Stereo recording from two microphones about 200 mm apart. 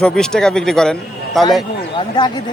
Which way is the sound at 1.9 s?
25° left (ahead or behind).